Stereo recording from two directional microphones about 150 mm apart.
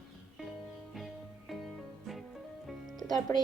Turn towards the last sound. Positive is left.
turn(degrees=30)  # may be behind; listen again after turning